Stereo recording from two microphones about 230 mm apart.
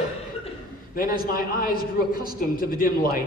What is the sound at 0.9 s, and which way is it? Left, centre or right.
A man's voice, left.